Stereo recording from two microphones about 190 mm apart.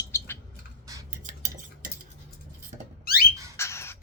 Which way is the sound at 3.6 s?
15° left (ahead or behind).